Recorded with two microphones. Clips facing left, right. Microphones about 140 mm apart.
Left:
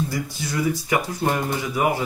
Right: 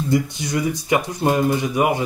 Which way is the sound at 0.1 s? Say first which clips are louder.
Right 7 dB; 20° right (ahead or behind).